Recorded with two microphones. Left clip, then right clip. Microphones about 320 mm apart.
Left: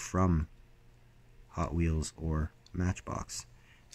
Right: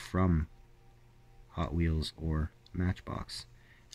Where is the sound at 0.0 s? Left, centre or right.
Centre.